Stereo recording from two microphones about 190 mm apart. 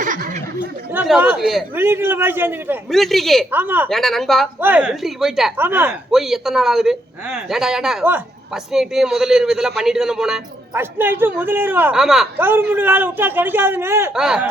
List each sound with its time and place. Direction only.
0.0 s a sound: 45° right (ahead or behind)
1.0 s speech: 10° right (ahead or behind)
1.7 s a man's voice: 10° right (ahead or behind)
2.9 s speech: centre (ahead or behind)
3.5 s a man's voice: 10° right (ahead or behind)
3.8 s a man's voice: centre (ahead or behind)